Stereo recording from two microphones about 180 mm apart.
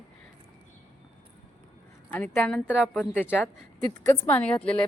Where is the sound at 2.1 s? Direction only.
10° left (ahead or behind).